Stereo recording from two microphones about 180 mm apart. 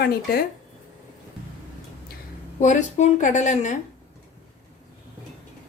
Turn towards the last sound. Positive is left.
turn(degrees=40)  # may be behind; listen again after turning